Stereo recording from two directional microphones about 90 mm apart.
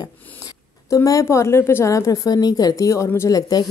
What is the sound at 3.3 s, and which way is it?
Speech, 45° left (ahead or behind).